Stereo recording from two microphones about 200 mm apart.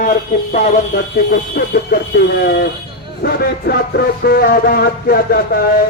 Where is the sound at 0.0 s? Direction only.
40° left (ahead or behind).